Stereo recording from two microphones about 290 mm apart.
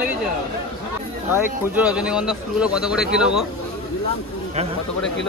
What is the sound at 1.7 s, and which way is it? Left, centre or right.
Speech, centre.